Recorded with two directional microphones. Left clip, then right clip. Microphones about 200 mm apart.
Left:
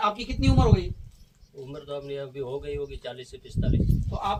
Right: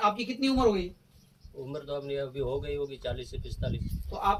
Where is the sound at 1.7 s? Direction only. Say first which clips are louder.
Even; 20° right (ahead or behind).